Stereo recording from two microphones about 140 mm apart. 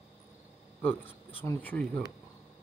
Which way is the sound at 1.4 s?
15° left (ahead or behind).